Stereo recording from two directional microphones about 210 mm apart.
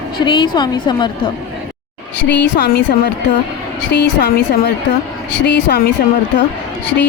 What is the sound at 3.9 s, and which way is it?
Speech, 50° left (ahead or behind).